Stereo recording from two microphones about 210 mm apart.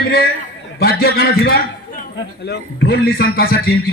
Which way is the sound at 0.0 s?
45° left (ahead or behind).